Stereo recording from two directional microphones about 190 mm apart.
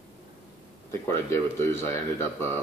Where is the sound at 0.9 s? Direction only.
15° left (ahead or behind).